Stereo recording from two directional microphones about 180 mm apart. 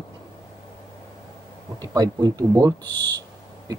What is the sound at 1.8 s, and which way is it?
Speech, 20° right (ahead or behind).